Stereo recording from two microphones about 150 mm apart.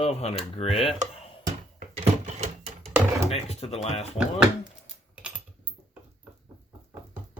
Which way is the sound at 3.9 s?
5° right (ahead or behind).